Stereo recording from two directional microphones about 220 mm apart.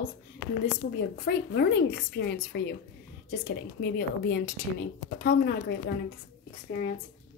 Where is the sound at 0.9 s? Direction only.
45° left (ahead or behind).